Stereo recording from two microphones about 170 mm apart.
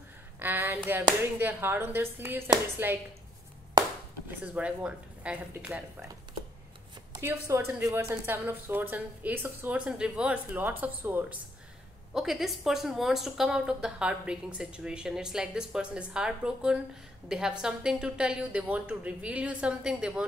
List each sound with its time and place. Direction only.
0.4 s a woman's voice: 10° right (ahead or behind)
4.4 s a woman's voice: 5° right (ahead or behind)
7.2 s a woman's voice: 15° right (ahead or behind)